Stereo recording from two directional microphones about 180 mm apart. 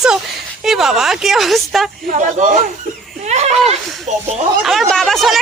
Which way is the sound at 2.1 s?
40° right (ahead or behind).